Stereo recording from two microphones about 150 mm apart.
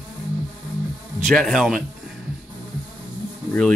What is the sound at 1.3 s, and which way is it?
Speech, 5° left (ahead or behind).